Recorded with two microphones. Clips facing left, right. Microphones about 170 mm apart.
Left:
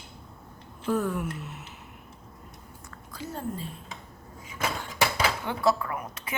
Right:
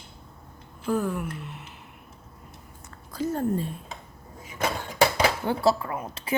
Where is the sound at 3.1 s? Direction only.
45° right (ahead or behind).